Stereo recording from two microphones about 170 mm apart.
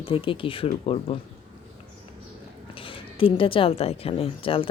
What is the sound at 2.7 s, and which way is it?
Speech, 30° left (ahead or behind).